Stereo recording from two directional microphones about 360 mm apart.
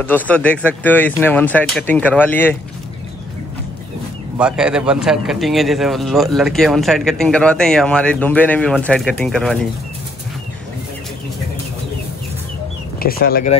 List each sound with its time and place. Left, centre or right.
0.0 s a man's voice: centre
4.4 s a man's voice: centre
13.0 s speech: left